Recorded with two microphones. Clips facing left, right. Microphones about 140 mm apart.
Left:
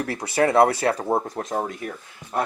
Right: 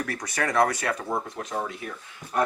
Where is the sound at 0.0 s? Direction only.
30° left (ahead or behind).